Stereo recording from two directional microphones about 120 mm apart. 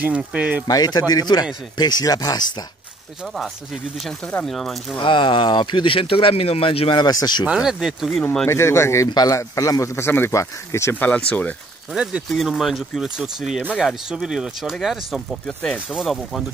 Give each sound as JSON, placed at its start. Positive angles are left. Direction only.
{"t": 0.0, "sound": "speech", "side_deg": -10}
{"t": 0.7, "sound": "speech", "side_deg": 35}
{"t": 4.5, "sound": "speech", "side_deg": 0}
{"t": 4.9, "sound": "speech", "side_deg": 45}
{"t": 7.0, "sound": "speech", "side_deg": 35}
{"t": 7.4, "sound": "speech", "side_deg": -5}
{"t": 8.5, "sound": "speech", "side_deg": 25}
{"t": 11.9, "sound": "speech", "side_deg": -5}